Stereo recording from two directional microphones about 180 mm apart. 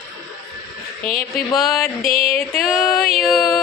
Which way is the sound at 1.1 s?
55° left (ahead or behind).